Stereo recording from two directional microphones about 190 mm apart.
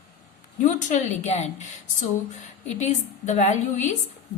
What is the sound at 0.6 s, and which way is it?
A woman's voice, 40° left (ahead or behind).